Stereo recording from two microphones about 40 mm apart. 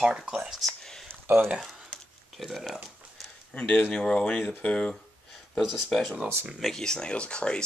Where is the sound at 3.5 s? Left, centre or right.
Left.